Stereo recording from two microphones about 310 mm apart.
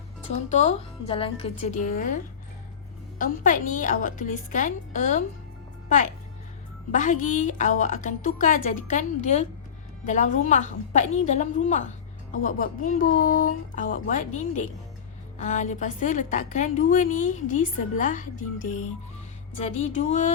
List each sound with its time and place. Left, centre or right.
0.3 s a woman's voice: left
6.9 s a woman's voice: left